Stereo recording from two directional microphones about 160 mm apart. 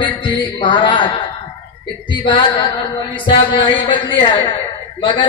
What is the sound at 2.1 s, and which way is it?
A man's voice, 30° left (ahead or behind).